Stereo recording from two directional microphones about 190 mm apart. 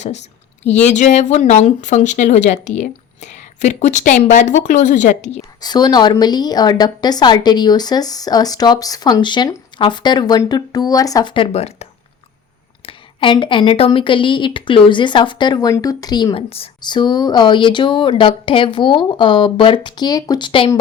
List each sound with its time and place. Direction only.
0.6 s speech: 35° left (ahead or behind)
5.4 s a woman's voice: 20° left (ahead or behind)